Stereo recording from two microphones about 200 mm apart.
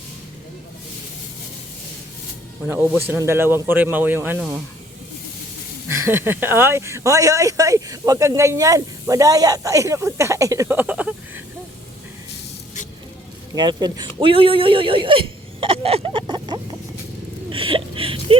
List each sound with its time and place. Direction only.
2.6 s speech: 10° right (ahead or behind)
5.9 s speech: 10° right (ahead or behind)
13.6 s speech: 20° right (ahead or behind)